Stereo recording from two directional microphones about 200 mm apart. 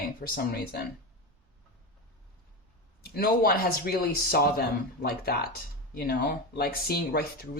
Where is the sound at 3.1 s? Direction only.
50° left (ahead or behind).